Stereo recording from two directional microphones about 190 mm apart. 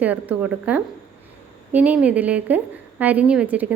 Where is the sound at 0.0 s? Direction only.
10° right (ahead or behind).